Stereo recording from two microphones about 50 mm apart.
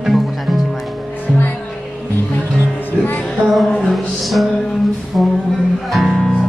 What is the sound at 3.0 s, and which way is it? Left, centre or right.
Music, left.